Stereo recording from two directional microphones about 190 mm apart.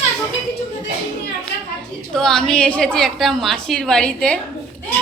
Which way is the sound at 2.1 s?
5° left (ahead or behind).